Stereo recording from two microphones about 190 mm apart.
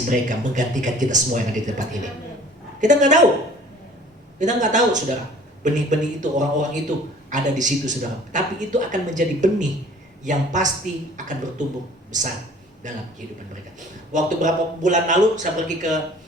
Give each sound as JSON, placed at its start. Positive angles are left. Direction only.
{"t": 0.1, "sound": "a man's voice", "side_deg": -40}
{"t": 4.4, "sound": "a man's voice", "side_deg": -40}
{"t": 12.8, "sound": "a man's voice", "side_deg": -40}
{"t": 14.1, "sound": "a man's voice", "side_deg": -40}